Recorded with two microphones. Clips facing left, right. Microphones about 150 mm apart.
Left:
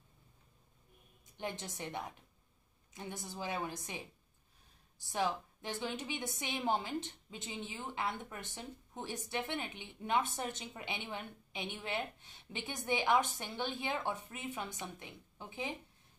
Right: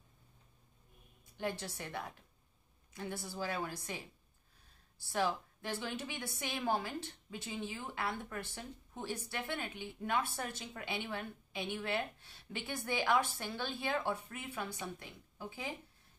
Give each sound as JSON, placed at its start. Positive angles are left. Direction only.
{"t": 1.3, "sound": "a woman's voice", "side_deg": 20}